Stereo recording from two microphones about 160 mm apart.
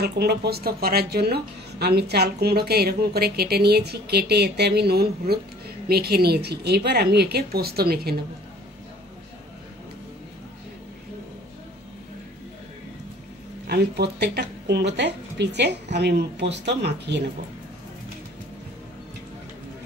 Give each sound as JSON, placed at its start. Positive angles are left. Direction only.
{"t": 0.0, "sound": "speech", "side_deg": -85}
{"t": 13.7, "sound": "a woman's voice", "side_deg": -90}